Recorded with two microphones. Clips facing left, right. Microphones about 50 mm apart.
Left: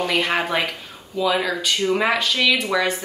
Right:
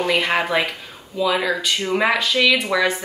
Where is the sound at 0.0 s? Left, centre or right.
Centre.